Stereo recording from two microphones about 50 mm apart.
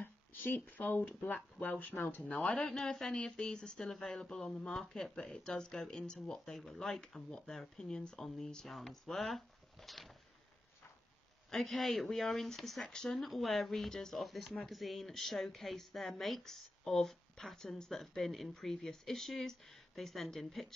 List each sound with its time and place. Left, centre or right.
0.0 s speech: left
2.2 s speech: left
2.7 s speech: centre
3.1 s speech: centre
11.5 s speech: centre